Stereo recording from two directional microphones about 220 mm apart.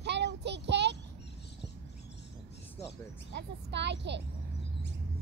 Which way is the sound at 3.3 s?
50° right (ahead or behind).